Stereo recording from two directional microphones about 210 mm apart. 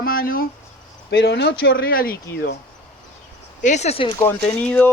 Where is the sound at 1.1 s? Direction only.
55° left (ahead or behind).